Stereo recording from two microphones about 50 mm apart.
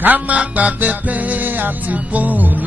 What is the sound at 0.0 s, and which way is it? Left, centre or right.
Music, right.